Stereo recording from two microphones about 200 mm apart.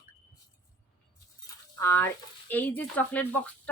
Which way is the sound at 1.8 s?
15° left (ahead or behind).